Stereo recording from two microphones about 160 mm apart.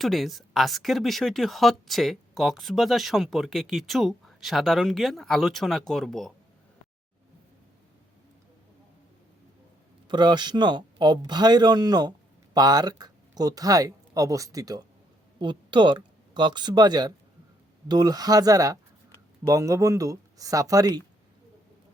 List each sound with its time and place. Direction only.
0.0 s speech: centre (ahead or behind)
10.1 s speech: 25° right (ahead or behind)